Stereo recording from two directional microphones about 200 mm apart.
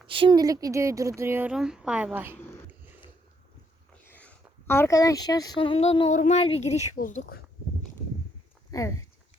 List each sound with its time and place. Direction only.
0.1 s speech: 25° right (ahead or behind)
3.9 s speech: 10° left (ahead or behind); by 7.4 s 45° left (ahead or behind)
8.7 s speech: 15° left (ahead or behind)